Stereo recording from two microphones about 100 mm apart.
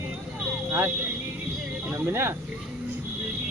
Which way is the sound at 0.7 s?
25° right (ahead or behind).